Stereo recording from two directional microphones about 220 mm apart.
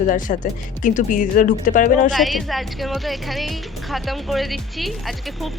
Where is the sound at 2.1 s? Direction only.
Centre (ahead or behind).